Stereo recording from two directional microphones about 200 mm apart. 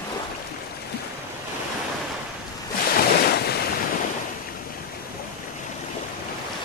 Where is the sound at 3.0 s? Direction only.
50° left (ahead or behind).